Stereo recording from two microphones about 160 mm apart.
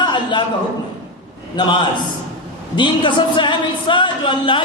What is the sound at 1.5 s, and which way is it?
A man's voice, 30° left (ahead or behind).